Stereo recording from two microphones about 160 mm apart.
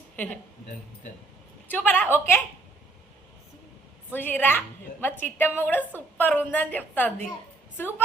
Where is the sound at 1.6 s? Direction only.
10° left (ahead or behind).